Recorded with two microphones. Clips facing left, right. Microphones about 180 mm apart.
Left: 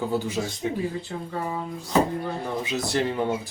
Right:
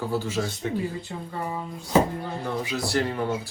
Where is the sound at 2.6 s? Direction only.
20° left (ahead or behind).